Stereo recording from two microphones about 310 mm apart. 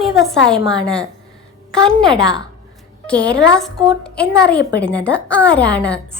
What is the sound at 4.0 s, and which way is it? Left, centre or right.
A woman's voice, centre.